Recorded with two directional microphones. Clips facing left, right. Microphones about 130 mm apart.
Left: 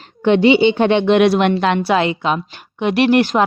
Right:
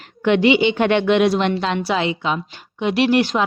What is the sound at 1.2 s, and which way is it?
A woman's voice, 65° left (ahead or behind).